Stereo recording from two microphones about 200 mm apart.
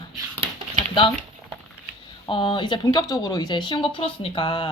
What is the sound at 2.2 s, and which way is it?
Speech, 25° left (ahead or behind).